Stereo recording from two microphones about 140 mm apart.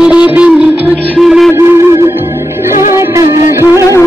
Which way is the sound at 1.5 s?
20° right (ahead or behind).